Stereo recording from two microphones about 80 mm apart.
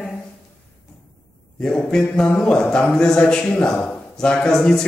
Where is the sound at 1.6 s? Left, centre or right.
Centre.